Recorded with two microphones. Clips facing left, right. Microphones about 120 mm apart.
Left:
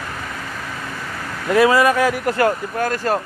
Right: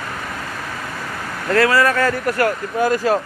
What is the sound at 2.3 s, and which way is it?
Speech, 25° left (ahead or behind).